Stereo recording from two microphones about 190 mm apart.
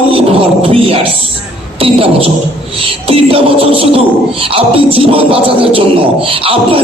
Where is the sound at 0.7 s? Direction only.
30° right (ahead or behind).